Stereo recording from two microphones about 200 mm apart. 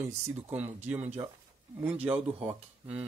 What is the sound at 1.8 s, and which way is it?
Speech, 10° right (ahead or behind).